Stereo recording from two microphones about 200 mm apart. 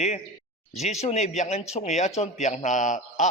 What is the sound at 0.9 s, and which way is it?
A man's voice, 35° left (ahead or behind).